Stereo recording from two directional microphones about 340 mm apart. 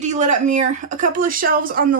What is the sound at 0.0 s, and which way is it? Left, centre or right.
Speech, right.